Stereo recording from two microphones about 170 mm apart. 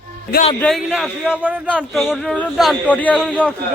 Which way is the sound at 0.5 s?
5° left (ahead or behind).